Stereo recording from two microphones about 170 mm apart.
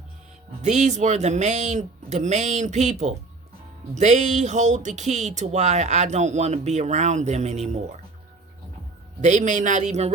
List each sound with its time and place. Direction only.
0.6 s speech: 45° right (ahead or behind)
9.2 s speech: 45° right (ahead or behind)